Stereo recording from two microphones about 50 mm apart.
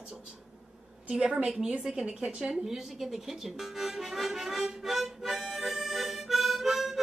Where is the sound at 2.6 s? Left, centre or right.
Centre.